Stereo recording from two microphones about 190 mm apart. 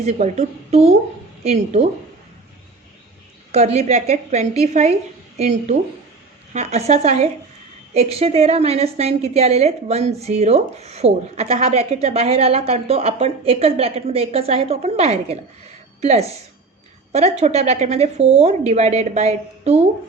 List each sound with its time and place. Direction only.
0.0 s a woman's voice: 35° right (ahead or behind)
3.5 s a woman's voice: 35° right (ahead or behind)